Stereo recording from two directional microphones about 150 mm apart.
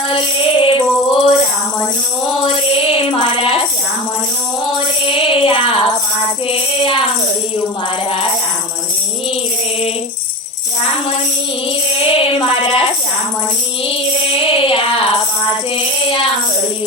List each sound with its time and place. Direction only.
0.1 s music: 35° left (ahead or behind)
2.4 s music: 35° left (ahead or behind)
5.0 s music: 35° left (ahead or behind)
12.0 s a sound: 40° left (ahead or behind)
14.3 s music: 35° left (ahead or behind)